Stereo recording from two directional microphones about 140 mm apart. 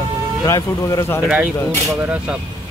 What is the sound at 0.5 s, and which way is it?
Speech, 25° left (ahead or behind).